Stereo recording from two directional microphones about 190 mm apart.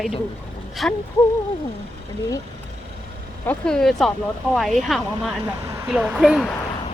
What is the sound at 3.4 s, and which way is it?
Speech, 5° left (ahead or behind).